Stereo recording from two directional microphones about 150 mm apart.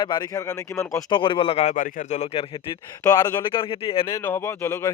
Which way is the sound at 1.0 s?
35° left (ahead or behind).